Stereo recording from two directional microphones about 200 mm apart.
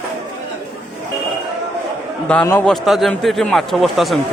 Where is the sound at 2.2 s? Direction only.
10° left (ahead or behind).